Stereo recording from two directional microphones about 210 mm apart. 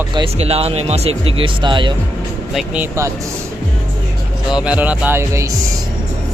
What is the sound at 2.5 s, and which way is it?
Speech, 5° right (ahead or behind).